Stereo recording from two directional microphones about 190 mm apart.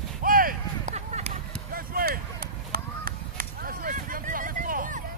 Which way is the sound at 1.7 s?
50° right (ahead or behind).